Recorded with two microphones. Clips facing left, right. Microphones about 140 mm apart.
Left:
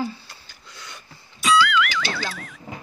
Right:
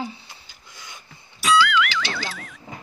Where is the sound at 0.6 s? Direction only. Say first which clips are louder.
Left 2 dB; 10° right (ahead or behind).